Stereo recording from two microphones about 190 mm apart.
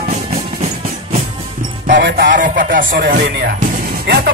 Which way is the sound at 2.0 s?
70° right (ahead or behind).